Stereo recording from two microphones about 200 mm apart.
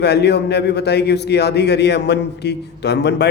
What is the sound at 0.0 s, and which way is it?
A man's voice, 55° left (ahead or behind).